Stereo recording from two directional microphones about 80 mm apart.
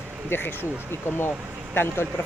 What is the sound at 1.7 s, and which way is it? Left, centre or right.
Speech, left.